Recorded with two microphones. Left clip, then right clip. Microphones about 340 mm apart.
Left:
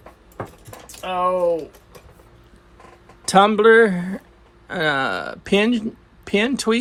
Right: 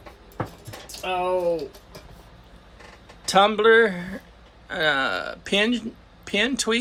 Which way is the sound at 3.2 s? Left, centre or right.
Left.